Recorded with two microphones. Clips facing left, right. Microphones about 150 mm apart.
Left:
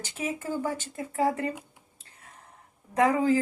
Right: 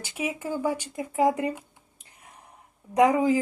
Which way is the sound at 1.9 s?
15° right (ahead or behind).